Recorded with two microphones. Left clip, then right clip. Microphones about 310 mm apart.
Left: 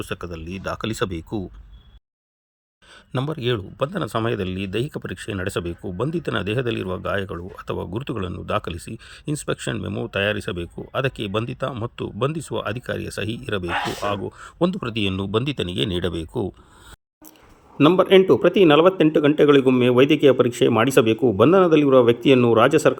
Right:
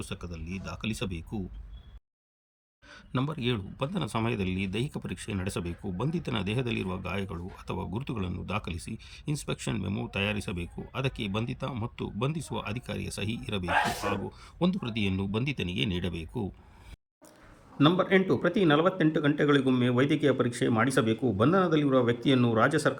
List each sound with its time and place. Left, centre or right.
0.0 s speech: centre
2.9 s speech: centre
17.8 s speech: left